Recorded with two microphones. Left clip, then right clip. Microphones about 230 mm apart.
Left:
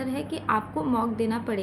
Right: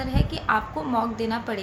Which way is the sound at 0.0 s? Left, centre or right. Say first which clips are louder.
Right 2 dB; centre.